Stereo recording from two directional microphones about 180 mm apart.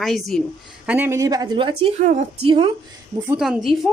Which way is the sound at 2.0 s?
40° right (ahead or behind).